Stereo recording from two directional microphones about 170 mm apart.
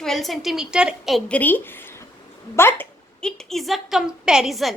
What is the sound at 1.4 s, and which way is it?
A woman's voice, 10° left (ahead or behind).